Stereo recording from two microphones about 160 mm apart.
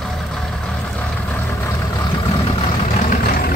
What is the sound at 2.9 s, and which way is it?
Vehicle, 45° left (ahead or behind).